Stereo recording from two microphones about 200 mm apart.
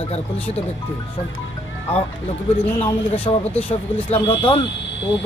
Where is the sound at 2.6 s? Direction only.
30° left (ahead or behind).